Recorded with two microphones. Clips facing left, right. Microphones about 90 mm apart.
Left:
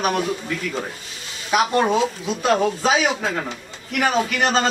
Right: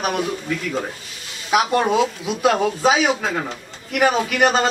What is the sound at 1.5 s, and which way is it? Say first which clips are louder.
A man's voice: right 1 dB; 5° right (ahead or behind).